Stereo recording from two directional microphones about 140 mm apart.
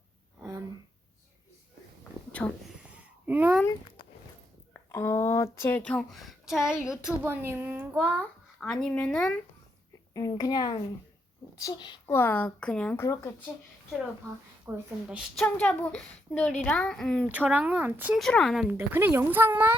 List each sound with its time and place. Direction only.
2.9 s a sound: 10° right (ahead or behind)
4.7 s a woman's voice: 20° left (ahead or behind); by 8.2 s 15° right (ahead or behind)
8.2 s speech: 5° left (ahead or behind)
10.2 s a woman's voice: 25° left (ahead or behind)
12.0 s a woman's voice: 15° left (ahead or behind)
13.0 s a woman's voice: 20° left (ahead or behind)
14.7 s speech: 15° right (ahead or behind)
15.0 s a woman's voice: 5° right (ahead or behind)
15.4 s a woman's voice: 10° left (ahead or behind)
17.2 s speech: 10° right (ahead or behind)
18.2 s a woman's voice: 5° left (ahead or behind)
18.7 s speech: 15° right (ahead or behind)